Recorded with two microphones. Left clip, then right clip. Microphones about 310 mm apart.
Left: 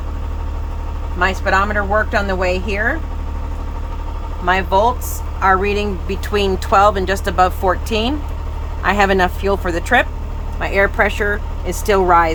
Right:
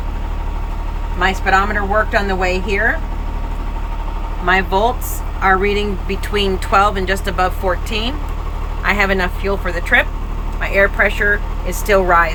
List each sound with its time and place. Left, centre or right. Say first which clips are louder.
1.2 s speech: right 1 dB; centre
4.4 s speech: even; centre